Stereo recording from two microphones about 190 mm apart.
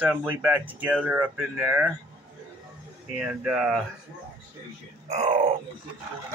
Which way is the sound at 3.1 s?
10° right (ahead or behind).